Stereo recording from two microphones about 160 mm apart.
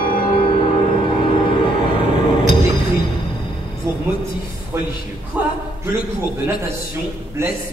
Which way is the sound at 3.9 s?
15° right (ahead or behind).